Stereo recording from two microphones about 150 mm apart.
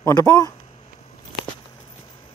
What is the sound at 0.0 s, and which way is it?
Speech, 20° left (ahead or behind).